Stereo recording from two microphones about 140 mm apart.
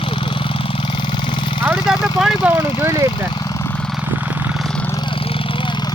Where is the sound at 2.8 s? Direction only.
25° right (ahead or behind).